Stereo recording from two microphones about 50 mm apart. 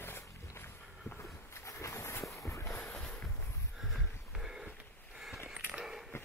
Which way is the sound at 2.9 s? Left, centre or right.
Centre.